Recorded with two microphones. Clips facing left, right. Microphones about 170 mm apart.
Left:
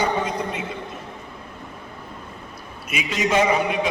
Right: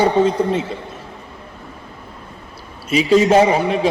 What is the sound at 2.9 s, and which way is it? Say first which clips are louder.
Speech: right 10 dB; 35° right (ahead or behind).